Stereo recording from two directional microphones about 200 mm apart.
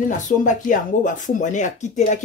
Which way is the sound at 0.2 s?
40° left (ahead or behind).